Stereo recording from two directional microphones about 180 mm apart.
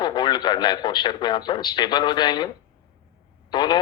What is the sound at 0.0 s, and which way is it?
A man's voice, 25° left (ahead or behind).